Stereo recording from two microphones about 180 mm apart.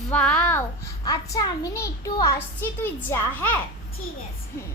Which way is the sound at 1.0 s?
20° left (ahead or behind).